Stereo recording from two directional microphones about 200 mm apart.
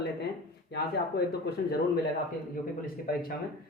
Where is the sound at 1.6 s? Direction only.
50° left (ahead or behind).